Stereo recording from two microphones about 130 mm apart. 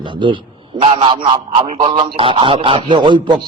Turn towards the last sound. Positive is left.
turn(degrees=-35)  # may be behind; listen again after turning